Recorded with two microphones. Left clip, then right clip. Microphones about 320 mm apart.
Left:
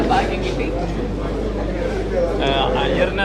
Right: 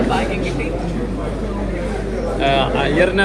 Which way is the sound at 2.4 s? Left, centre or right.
Right.